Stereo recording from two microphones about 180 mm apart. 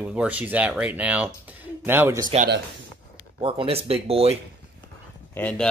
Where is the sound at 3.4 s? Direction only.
30° right (ahead or behind).